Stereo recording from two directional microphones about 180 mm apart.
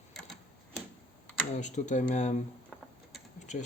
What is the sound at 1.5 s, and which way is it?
Speech, 40° left (ahead or behind).